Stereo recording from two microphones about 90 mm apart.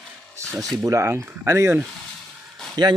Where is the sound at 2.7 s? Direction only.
55° right (ahead or behind).